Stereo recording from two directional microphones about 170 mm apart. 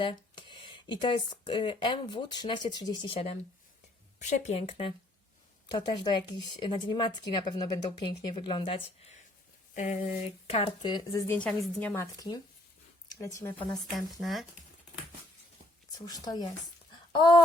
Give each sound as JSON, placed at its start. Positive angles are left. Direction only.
{"t": 0.0, "sound": "speech", "side_deg": 30}
{"t": 4.2, "sound": "speech", "side_deg": 35}
{"t": 5.7, "sound": "speech", "side_deg": 25}
{"t": 9.7, "sound": "speech", "side_deg": 50}
{"t": 11.3, "sound": "a woman's voice", "side_deg": 5}
{"t": 13.1, "sound": "speech", "side_deg": 20}
{"t": 13.9, "sound": "speech", "side_deg": 0}
{"t": 15.9, "sound": "speech", "side_deg": 20}